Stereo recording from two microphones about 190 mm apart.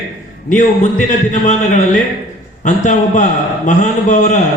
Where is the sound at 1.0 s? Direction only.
40° left (ahead or behind).